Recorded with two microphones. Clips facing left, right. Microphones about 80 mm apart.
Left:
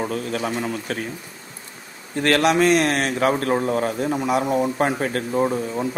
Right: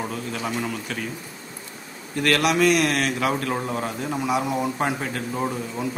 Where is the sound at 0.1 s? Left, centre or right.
Left.